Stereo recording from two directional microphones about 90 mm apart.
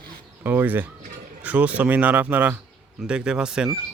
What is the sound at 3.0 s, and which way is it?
Speech, 10° right (ahead or behind).